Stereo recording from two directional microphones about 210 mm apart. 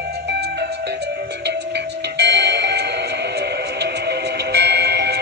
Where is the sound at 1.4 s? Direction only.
55° right (ahead or behind).